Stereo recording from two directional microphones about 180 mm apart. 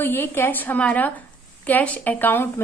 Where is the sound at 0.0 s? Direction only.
10° left (ahead or behind).